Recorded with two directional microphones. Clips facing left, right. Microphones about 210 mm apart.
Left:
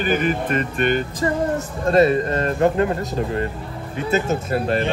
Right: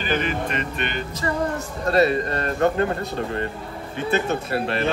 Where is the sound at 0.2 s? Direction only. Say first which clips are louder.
Left 5 dB; 45° left (ahead or behind).